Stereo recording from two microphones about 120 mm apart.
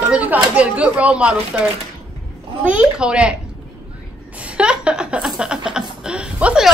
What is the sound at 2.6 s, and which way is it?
Speech, 10° right (ahead or behind).